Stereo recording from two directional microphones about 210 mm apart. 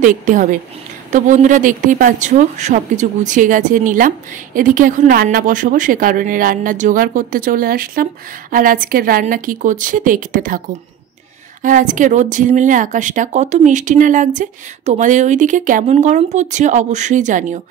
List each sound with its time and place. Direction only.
0.0 s a woman's voice: 40° right (ahead or behind)
11.6 s a woman's voice: 40° right (ahead or behind)